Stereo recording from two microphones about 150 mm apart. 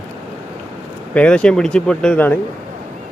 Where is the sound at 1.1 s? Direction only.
10° left (ahead or behind).